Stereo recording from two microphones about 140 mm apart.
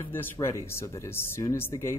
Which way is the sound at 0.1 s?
15° left (ahead or behind).